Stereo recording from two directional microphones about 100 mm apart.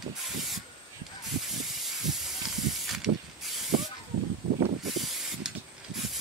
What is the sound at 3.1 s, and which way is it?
Hiss, 70° right (ahead or behind).